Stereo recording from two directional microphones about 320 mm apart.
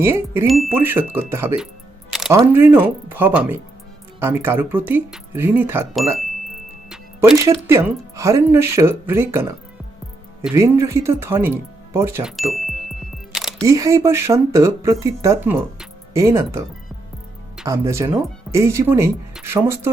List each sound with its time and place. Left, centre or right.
0.0 s speech: centre
6.9 s music: centre
7.4 s speech: centre